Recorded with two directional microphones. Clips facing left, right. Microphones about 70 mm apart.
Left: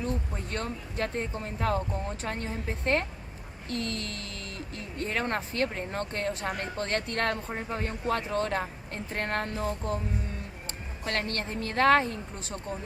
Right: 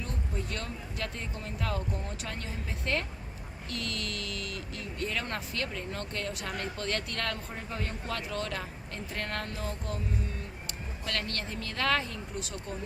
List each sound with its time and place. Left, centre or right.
0.0 s speech: left
11.0 s speech: left